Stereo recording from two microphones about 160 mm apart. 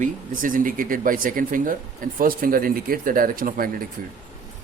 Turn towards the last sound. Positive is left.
turn(degrees=-65)  # may be behind; listen again after turning